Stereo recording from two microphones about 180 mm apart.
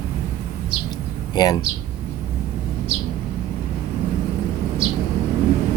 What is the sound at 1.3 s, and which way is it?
Speech, 25° left (ahead or behind).